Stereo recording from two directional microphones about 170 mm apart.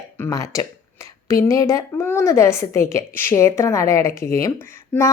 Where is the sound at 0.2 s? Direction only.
20° left (ahead or behind).